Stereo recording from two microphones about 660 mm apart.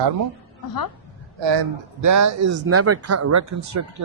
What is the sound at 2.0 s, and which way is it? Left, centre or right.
Speech, right.